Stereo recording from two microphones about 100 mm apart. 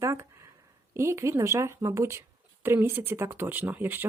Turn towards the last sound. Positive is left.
turn(degrees=-20)  # may be behind; listen again after turning